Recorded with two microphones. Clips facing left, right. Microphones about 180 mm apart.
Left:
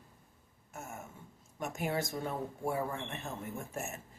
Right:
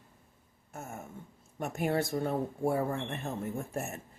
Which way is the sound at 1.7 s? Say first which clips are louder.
Right 5 dB; 60° right (ahead or behind).